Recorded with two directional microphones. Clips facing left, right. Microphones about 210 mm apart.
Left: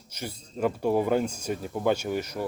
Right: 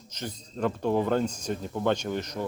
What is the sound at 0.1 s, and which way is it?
Speech, 10° left (ahead or behind).